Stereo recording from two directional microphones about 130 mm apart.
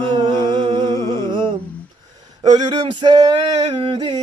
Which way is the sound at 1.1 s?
35° right (ahead or behind).